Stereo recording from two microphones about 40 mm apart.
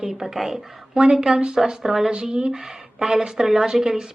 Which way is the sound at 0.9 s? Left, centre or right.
Right.